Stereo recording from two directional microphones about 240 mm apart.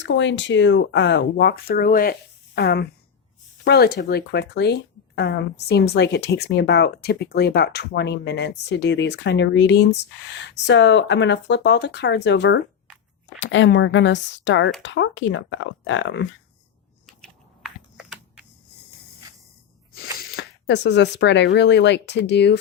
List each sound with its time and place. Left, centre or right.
0.0 s speech: left
17.1 s typing: centre
17.9 s computer keyboard: centre
20.3 s speech: left